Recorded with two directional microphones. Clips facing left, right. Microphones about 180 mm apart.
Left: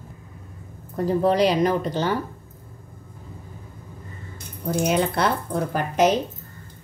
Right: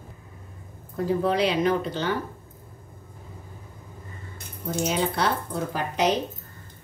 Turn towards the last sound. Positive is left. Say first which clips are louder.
# left 5 dB
turn(degrees=50)  # may be behind; listen again after turning